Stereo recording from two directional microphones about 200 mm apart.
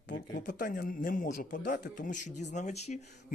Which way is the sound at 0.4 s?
45° left (ahead or behind).